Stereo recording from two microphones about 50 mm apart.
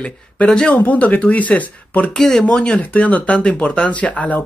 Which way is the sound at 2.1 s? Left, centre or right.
Centre.